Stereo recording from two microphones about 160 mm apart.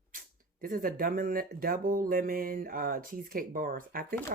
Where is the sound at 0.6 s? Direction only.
65° right (ahead or behind).